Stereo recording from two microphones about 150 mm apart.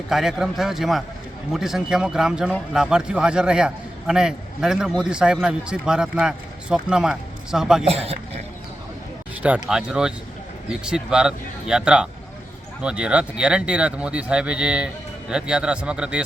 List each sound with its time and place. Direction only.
0.1 s a man's voice: 5° right (ahead or behind)
7.9 s speech: 40° right (ahead or behind)
9.4 s a man's voice: 5° right (ahead or behind)